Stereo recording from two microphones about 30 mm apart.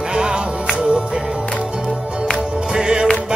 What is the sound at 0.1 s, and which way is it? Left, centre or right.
Music, right.